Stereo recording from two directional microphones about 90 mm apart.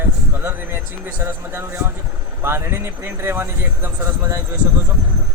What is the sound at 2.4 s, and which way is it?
Speech, 25° right (ahead or behind).